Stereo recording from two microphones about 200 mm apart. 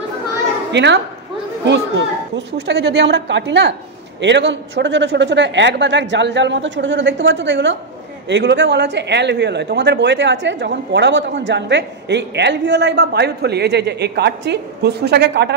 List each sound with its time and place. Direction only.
0.7 s a child's voice: 60° right (ahead or behind)